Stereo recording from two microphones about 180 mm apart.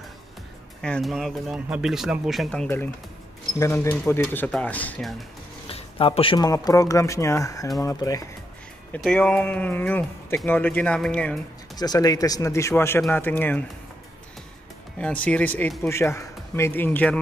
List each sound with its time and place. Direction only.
0.8 s speech: 5° left (ahead or behind)
3.5 s speech: 15° left (ahead or behind)
5.7 s speech: 30° left (ahead or behind)
8.9 s speech: 5° left (ahead or behind)
11.7 s speech: 20° left (ahead or behind)
15.0 s speech: 5° left (ahead or behind)